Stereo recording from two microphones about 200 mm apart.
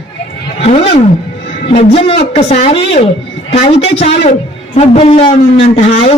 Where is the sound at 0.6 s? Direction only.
30° left (ahead or behind).